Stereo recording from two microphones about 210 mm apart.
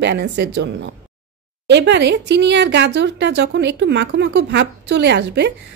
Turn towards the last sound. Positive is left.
turn(degrees=-55)  # may be behind; listen again after turning